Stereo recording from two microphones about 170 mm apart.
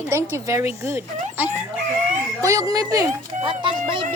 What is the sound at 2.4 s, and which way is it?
Speech, 20° right (ahead or behind).